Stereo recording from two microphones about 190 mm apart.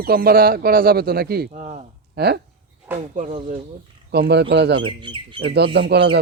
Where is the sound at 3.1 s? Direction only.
40° right (ahead or behind).